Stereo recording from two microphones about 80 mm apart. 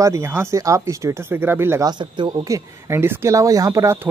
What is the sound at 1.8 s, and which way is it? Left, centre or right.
Speech, right.